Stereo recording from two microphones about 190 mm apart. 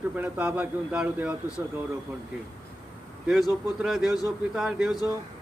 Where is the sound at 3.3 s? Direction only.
Centre (ahead or behind).